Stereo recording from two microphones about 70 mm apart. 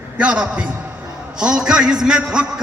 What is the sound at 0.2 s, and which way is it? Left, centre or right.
A man's voice, centre.